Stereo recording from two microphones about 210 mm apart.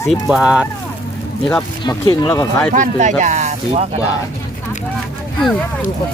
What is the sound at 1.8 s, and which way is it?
Speech, 20° left (ahead or behind).